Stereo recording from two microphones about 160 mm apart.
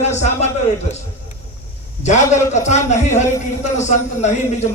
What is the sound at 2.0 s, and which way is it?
Speech, 45° left (ahead or behind).